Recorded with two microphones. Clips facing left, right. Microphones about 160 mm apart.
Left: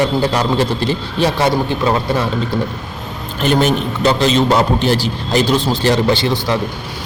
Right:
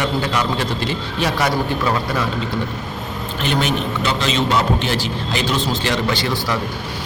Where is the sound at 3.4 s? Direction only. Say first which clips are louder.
Left 6 dB; 40° left (ahead or behind).